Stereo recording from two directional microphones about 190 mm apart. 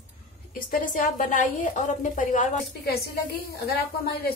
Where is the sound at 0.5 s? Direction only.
45° left (ahead or behind).